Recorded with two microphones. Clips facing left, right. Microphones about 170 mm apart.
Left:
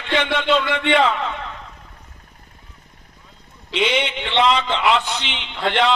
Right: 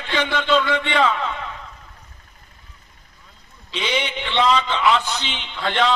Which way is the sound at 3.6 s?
65° left (ahead or behind).